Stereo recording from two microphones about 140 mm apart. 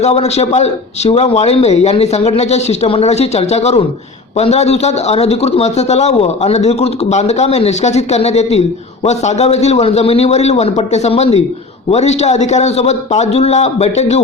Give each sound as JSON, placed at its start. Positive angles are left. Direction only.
{"t": 0.0, "sound": "a man's voice", "side_deg": 50}